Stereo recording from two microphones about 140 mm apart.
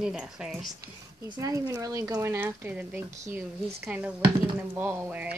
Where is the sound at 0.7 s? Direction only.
25° right (ahead or behind).